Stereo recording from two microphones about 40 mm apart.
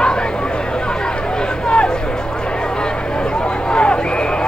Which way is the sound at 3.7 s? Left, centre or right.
Left.